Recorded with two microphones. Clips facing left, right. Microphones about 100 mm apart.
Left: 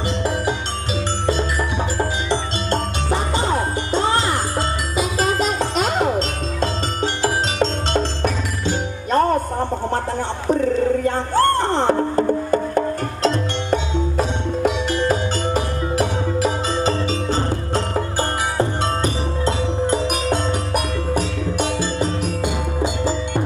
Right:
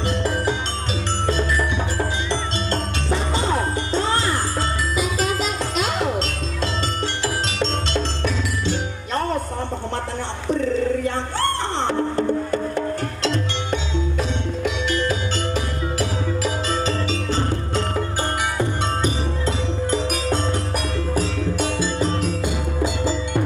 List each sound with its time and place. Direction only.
4.1 s music: 20° left (ahead or behind)
5.2 s music: 45° left (ahead or behind)
10.5 s music: 45° left (ahead or behind)
19.9 s music: 20° left (ahead or behind)